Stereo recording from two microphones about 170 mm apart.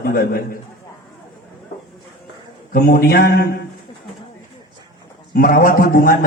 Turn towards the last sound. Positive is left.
turn(degrees=55)  # may be behind; listen again after turning